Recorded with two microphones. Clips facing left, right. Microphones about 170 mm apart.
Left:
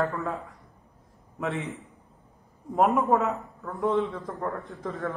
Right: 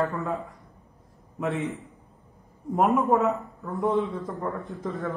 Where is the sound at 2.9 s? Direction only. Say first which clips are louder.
Right 2 dB; centre (ahead or behind).